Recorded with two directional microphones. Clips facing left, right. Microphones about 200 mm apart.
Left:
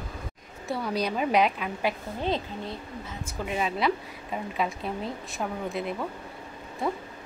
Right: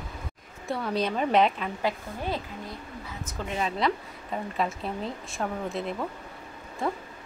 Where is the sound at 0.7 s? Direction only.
Centre (ahead or behind).